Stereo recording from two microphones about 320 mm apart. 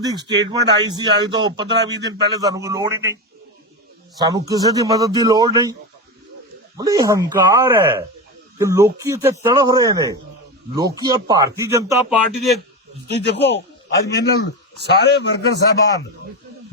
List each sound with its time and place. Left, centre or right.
0.0 s speech: centre
4.2 s speech: centre
6.7 s speech: centre
13.1 s a man's voice: left
14.8 s a man's voice: left